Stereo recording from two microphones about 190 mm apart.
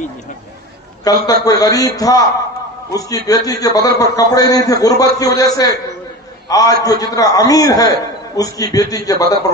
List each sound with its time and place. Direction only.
1.0 s a man's voice: 20° left (ahead or behind)